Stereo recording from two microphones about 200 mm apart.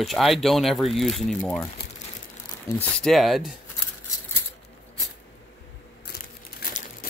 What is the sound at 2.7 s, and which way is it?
Speech, 10° left (ahead or behind).